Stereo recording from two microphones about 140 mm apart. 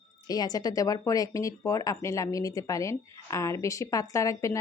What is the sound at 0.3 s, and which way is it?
A woman's voice, 30° left (ahead or behind).